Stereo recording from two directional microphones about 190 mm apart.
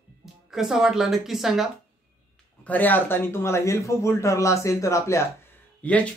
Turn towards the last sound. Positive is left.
turn(degrees=5)  # may be behind; listen again after turning